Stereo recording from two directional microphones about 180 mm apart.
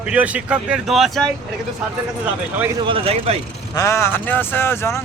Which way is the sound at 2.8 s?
30° right (ahead or behind).